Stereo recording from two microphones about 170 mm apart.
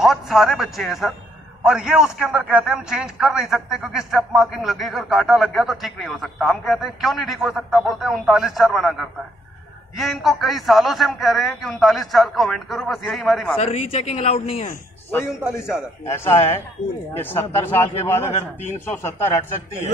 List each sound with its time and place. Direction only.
0.0 s speech: centre (ahead or behind)
13.6 s speech: 35° left (ahead or behind)
16.1 s speech: 15° left (ahead or behind)